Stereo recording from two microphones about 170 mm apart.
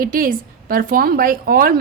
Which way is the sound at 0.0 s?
55° right (ahead or behind).